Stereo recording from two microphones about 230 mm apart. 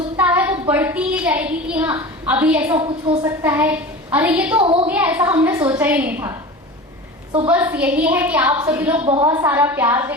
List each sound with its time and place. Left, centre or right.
0.2 s a sound: centre
0.7 s a woman's voice: centre
2.7 s a woman's voice: right
4.6 s a woman's voice: right
4.9 s a woman's voice: centre
7.4 s a woman's voice: centre
9.0 s a woman's voice: centre